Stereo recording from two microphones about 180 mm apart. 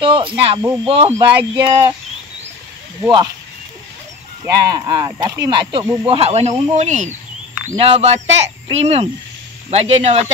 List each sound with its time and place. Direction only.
0.0 s speech: 30° right (ahead or behind)
3.0 s speech: 20° right (ahead or behind)
4.5 s speech: 20° right (ahead or behind); by 10.3 s 35° right (ahead or behind)